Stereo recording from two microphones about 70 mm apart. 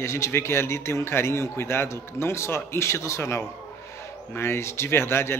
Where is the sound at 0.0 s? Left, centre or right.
Left.